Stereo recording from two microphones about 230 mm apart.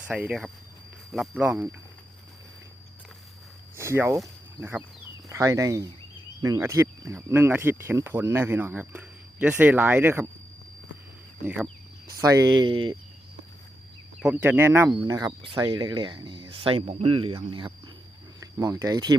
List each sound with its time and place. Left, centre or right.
0.1 s speech: centre
3.8 s speech: centre
11.4 s speech: centre
12.0 s speech: centre
14.2 s speech: centre